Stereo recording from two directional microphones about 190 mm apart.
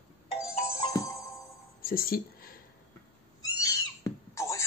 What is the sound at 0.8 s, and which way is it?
Music, 15° left (ahead or behind).